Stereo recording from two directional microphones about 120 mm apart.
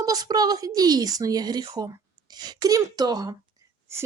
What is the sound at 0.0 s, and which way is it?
Speech, 30° right (ahead or behind).